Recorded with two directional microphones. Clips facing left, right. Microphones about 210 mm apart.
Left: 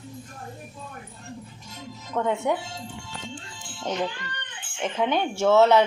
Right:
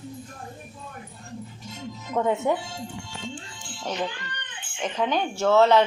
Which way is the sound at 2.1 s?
10° right (ahead or behind).